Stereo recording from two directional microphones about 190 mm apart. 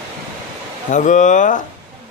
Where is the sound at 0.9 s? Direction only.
40° left (ahead or behind).